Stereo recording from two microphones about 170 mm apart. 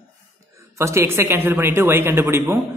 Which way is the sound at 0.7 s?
15° right (ahead or behind).